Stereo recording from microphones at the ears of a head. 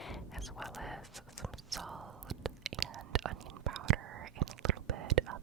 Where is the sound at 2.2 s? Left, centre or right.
Right.